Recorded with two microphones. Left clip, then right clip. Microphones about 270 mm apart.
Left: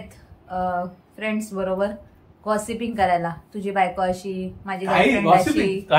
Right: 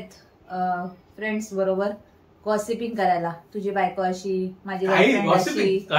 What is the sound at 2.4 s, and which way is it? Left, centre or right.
A woman's voice, centre.